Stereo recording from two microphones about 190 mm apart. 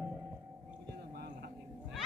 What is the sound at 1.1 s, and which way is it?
Vehicle, 55° right (ahead or behind).